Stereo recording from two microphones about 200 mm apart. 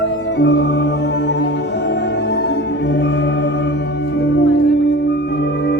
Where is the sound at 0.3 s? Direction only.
65° left (ahead or behind).